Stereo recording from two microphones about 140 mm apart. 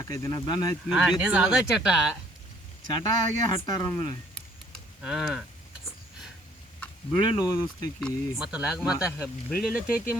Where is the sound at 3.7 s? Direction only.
25° left (ahead or behind).